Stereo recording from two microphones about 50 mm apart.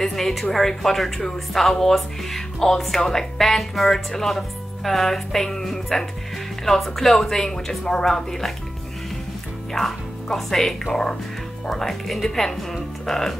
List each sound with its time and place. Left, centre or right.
0.0 s a woman's voice: centre
9.8 s a woman's voice: centre